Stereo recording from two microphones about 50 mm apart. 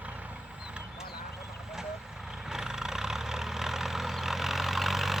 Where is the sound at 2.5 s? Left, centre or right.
Centre.